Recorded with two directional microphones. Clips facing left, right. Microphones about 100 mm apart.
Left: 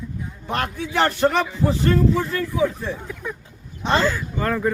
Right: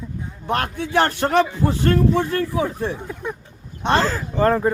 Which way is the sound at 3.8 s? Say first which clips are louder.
Right 1 dB; 50° right (ahead or behind).